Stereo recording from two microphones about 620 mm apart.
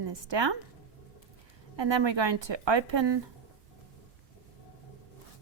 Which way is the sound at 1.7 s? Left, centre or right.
Right.